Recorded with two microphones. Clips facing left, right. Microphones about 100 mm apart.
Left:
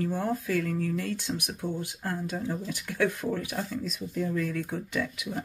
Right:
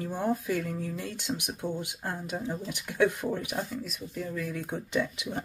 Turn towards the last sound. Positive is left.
turn(degrees=-25)  # may be behind; listen again after turning